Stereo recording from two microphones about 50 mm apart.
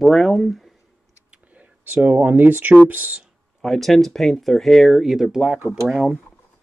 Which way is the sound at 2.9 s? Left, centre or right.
Right.